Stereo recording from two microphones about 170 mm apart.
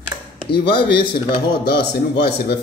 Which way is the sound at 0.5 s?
30° left (ahead or behind).